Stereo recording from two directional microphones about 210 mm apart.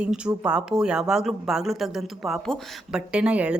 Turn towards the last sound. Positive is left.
turn(degrees=-5)  # may be behind; listen again after turning